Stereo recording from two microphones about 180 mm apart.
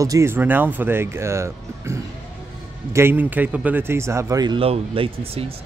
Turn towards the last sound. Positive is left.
turn(degrees=-30)  # may be behind; listen again after turning